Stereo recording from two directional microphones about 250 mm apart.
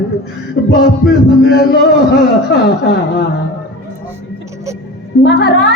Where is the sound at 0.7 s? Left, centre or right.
Centre.